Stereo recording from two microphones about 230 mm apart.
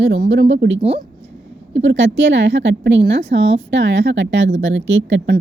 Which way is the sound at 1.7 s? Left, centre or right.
Right.